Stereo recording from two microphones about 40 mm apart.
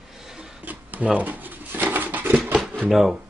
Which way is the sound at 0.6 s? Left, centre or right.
Right.